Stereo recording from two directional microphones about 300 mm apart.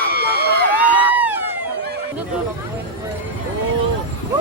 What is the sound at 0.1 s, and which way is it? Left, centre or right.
Crowd, right.